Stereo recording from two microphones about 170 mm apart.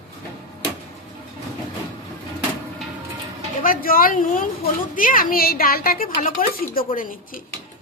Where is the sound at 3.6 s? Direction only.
55° left (ahead or behind).